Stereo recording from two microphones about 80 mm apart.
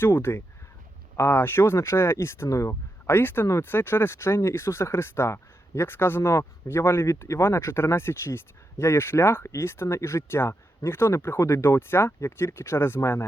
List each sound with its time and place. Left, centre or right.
0.0 s speech: left